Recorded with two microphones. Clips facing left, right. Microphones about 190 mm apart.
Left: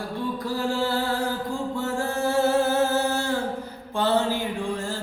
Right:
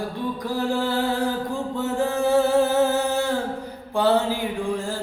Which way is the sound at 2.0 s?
15° right (ahead or behind).